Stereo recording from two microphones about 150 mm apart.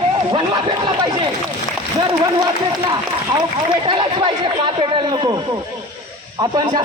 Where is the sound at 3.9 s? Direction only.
30° right (ahead or behind).